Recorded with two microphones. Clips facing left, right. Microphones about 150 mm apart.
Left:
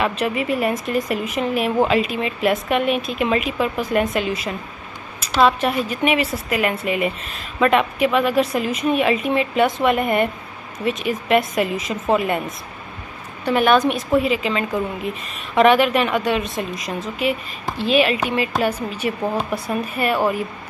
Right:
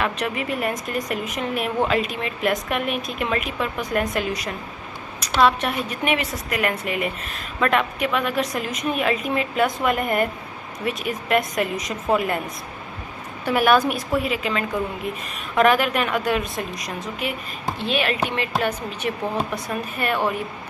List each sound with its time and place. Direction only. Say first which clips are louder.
0.0 s a woman's voice: left 4 dB; 5° left (ahead or behind)
5.9 s a woman's voice: left 4 dB; centre (ahead or behind)